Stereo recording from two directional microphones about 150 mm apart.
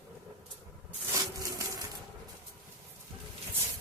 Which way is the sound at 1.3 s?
25° right (ahead or behind).